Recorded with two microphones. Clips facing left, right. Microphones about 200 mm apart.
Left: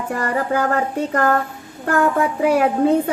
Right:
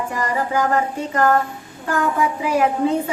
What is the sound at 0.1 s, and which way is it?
Child singing, 60° left (ahead or behind).